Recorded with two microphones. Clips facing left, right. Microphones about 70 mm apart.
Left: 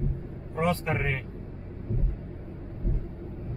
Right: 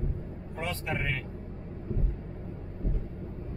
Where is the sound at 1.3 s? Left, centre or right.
Centre.